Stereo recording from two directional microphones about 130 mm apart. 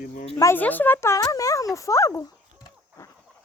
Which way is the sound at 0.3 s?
25° left (ahead or behind).